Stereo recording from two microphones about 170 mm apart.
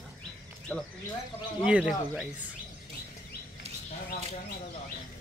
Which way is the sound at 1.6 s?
5° right (ahead or behind).